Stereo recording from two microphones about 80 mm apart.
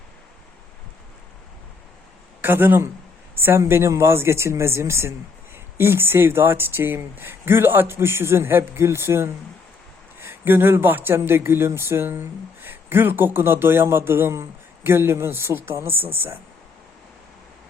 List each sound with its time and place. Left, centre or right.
2.4 s speech: right